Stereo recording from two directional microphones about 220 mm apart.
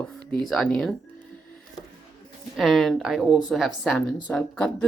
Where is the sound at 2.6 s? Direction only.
Centre (ahead or behind).